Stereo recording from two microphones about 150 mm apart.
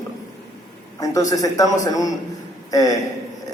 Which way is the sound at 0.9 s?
20° left (ahead or behind).